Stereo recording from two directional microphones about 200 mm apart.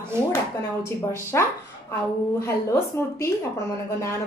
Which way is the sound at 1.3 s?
15° left (ahead or behind).